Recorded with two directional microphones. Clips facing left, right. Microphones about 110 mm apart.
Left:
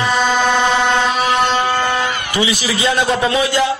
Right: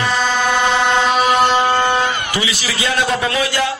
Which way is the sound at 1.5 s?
20° right (ahead or behind).